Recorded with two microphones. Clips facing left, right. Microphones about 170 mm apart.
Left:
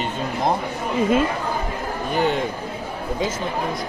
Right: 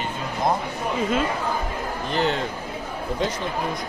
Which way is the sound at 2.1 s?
10° left (ahead or behind).